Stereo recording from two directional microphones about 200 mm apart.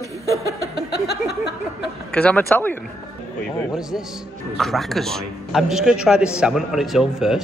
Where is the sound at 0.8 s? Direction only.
55° left (ahead or behind).